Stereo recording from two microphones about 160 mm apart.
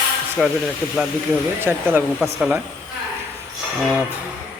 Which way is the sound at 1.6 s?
15° right (ahead or behind).